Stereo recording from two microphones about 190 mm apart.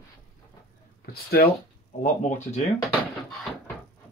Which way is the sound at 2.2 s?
40° left (ahead or behind).